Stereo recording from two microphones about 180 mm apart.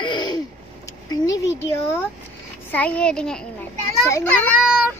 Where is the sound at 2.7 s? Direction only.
5° left (ahead or behind).